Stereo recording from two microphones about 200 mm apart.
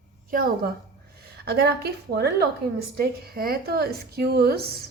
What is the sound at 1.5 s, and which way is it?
A woman's voice, 50° right (ahead or behind).